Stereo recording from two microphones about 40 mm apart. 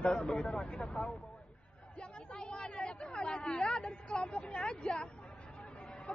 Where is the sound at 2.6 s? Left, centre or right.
Left.